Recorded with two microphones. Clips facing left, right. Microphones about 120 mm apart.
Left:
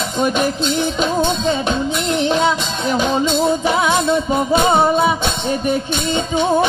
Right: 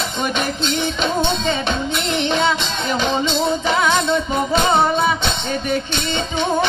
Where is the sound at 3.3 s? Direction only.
45° left (ahead or behind).